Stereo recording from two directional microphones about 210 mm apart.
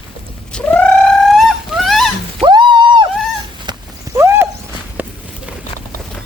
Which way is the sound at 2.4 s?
20° right (ahead or behind).